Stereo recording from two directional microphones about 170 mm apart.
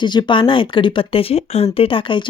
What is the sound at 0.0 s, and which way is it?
Speech, 25° left (ahead or behind).